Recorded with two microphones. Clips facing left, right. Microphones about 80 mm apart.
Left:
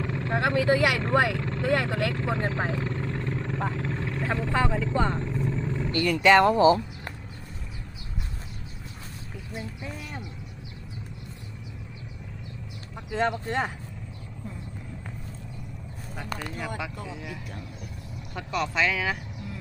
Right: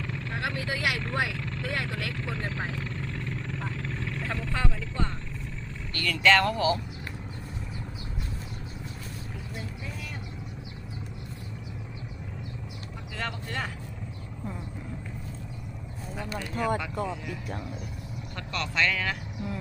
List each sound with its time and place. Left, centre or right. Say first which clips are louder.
0.0 s vehicle: left 7 dB; left
0.7 s speech: left 8 dB; left
13.1 s speech: left 9 dB; left
16.6 s speech: right 9 dB; centre
18.3 s speech: left 3 dB; centre